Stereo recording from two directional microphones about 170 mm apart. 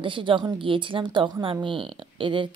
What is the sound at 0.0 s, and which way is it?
Speech, 30° right (ahead or behind).